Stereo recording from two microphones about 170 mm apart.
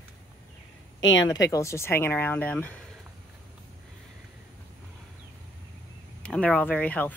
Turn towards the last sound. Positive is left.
turn(degrees=10)  # may be behind; listen again after turning